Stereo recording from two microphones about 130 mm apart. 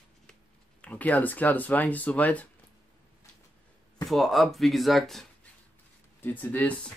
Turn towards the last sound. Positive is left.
turn(degrees=10)  # may be behind; listen again after turning